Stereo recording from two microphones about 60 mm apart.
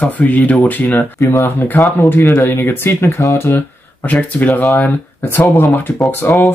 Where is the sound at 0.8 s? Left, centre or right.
Left.